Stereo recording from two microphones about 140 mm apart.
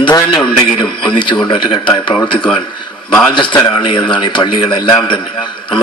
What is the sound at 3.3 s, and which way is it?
A man's voice, 35° left (ahead or behind).